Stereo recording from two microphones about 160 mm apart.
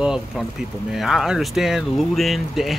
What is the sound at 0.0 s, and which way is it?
Speech, 5° right (ahead or behind).